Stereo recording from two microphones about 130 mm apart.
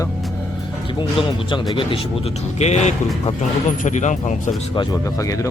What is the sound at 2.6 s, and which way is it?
Speech, 60° left (ahead or behind).